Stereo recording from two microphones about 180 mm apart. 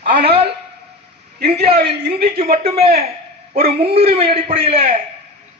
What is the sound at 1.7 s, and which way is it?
Speech, 60° right (ahead or behind).